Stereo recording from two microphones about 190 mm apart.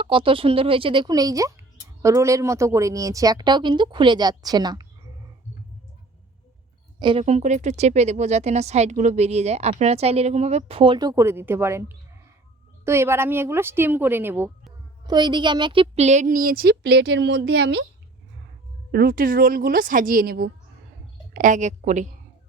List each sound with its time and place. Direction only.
0.0 s speech: 25° right (ahead or behind)
7.0 s a woman's voice: 30° right (ahead or behind); by 14.5 s 10° right (ahead or behind)
15.0 s a woman's voice: 20° right (ahead or behind); by 17.8 s 65° right (ahead or behind)
18.9 s a woman's voice: 50° right (ahead or behind)
21.3 s a woman's voice: 40° right (ahead or behind)